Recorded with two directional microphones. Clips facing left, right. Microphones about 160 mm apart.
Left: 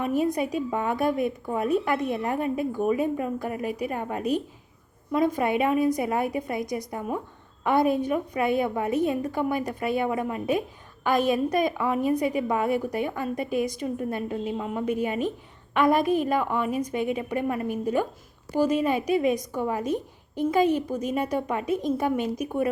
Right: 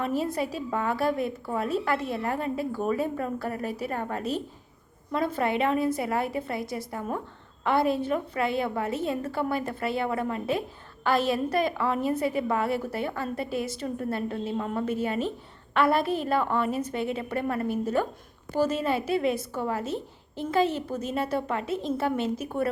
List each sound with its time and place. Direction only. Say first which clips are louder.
0.0 s a woman's voice: left 3 dB; 15° left (ahead or behind)